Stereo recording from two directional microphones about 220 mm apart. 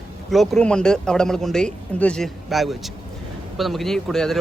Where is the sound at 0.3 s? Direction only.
Centre (ahead or behind).